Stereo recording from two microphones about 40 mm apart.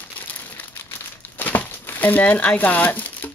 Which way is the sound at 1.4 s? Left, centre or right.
Left.